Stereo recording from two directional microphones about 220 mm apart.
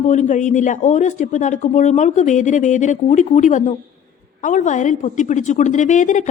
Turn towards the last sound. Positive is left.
turn(degrees=35)  # may be behind; listen again after turning